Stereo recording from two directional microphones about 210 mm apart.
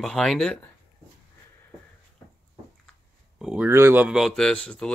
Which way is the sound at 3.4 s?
5° right (ahead or behind).